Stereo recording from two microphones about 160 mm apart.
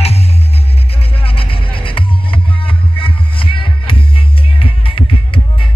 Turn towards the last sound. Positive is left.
turn(degrees=35)  # may be behind; listen again after turning